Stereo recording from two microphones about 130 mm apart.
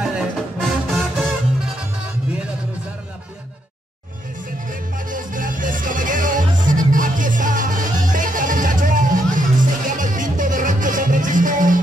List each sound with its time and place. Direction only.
0.0 s music: 5° right (ahead or behind)
4.6 s music: 90° right